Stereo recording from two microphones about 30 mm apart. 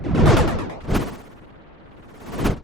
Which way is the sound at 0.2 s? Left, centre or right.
Centre.